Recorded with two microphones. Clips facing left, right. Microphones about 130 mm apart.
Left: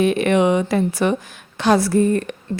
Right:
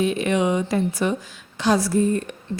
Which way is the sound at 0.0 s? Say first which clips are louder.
Left 5 dB; 65° left (ahead or behind).